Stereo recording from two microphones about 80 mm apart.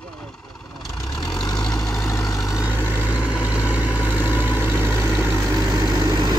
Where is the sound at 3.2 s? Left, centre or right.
Centre.